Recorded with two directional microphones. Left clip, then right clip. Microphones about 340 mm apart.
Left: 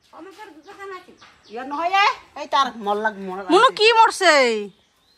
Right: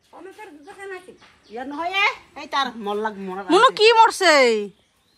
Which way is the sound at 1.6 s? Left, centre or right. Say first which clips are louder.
Left 3 dB; left.